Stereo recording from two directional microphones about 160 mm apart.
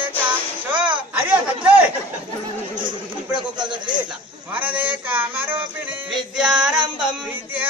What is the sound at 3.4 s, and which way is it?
Speech, 30° right (ahead or behind).